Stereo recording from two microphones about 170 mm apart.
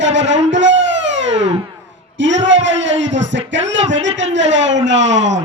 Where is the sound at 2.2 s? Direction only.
90° right.